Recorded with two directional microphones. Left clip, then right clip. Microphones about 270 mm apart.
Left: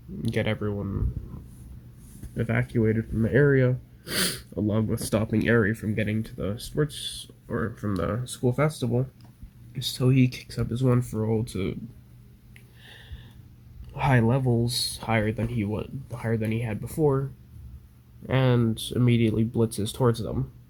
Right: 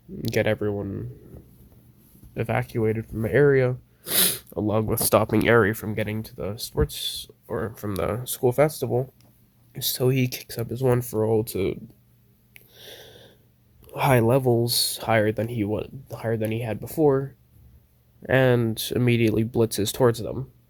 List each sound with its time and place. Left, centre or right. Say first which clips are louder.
0.2 s speech: right 5 dB; right
2.3 s speech: right 2 dB; right
12.5 s wheeze: right 5 dB; right
13.8 s speech: right 4 dB; right
18.3 s speech: right 5 dB; right